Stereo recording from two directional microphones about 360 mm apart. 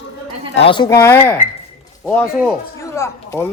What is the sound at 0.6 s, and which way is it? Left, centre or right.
Speech, centre.